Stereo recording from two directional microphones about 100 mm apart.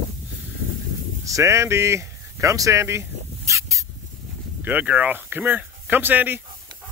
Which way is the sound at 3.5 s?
30° right (ahead or behind).